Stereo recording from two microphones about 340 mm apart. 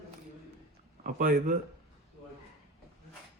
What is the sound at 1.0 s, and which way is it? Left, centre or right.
Speech, right.